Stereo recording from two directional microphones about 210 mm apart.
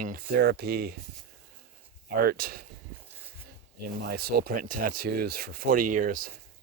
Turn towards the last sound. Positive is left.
turn(degrees=-40)  # may be behind; listen again after turning